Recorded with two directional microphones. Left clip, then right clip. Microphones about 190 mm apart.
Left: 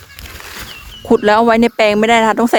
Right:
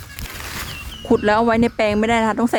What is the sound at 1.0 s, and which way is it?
Speech, 45° left (ahead or behind).